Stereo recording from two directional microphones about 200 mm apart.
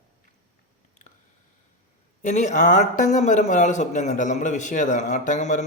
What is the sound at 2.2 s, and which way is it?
Speech, 35° left (ahead or behind).